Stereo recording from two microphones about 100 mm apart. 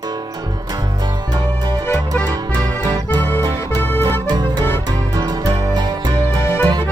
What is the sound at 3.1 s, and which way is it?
Accordion, 25° left (ahead or behind).